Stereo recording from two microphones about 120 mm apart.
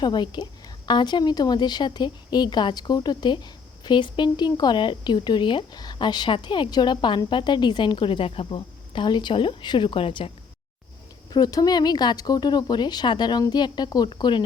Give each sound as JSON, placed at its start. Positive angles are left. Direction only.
{"t": 0.0, "sound": "a woman's voice", "side_deg": 40}
{"t": 11.3, "sound": "a woman's voice", "side_deg": 30}